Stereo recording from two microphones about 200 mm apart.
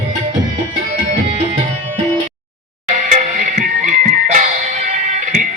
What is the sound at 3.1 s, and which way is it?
Music, 40° right (ahead or behind).